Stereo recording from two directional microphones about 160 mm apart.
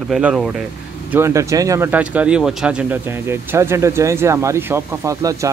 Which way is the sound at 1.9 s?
10° right (ahead or behind).